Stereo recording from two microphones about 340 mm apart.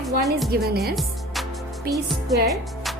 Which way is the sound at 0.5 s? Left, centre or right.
Right.